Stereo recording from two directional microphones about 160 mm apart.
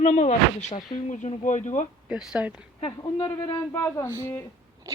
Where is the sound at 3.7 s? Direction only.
15° left (ahead or behind).